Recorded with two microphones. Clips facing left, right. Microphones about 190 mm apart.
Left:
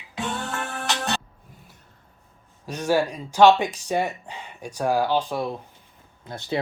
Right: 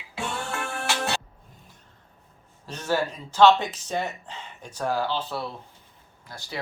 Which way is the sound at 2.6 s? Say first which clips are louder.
Left 4 dB; 10° left (ahead or behind).